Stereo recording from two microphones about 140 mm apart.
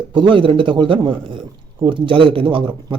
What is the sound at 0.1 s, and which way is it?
A man's voice, 35° right (ahead or behind).